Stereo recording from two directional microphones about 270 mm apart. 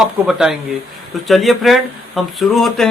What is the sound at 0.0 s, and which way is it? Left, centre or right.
Speech, centre.